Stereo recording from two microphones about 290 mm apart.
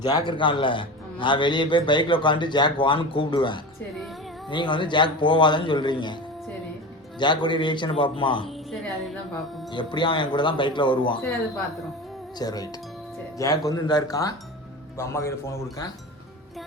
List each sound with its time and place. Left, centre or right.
0.0 s a man's voice: centre
7.2 s a man's voice: centre
8.4 s music: centre
9.7 s a man's voice: centre
12.4 s a man's voice: centre